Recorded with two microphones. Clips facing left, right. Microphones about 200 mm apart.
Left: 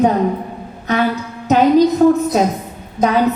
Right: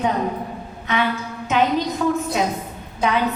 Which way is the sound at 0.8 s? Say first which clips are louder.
Left 5 dB; 40° left (ahead or behind).